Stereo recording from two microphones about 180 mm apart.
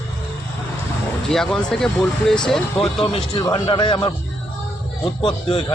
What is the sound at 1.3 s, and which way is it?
Speech, centre (ahead or behind).